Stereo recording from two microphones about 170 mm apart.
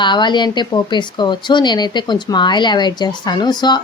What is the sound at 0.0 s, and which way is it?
A woman's voice, 25° left (ahead or behind).